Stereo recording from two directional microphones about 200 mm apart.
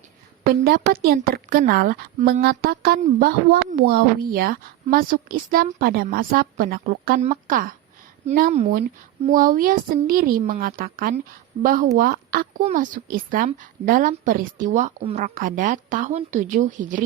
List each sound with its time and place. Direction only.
0.4 s a woman's voice: 50° right (ahead or behind)
9.3 s a woman's voice: 45° right (ahead or behind)